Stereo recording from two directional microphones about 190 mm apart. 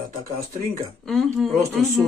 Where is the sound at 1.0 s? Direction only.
Centre (ahead or behind).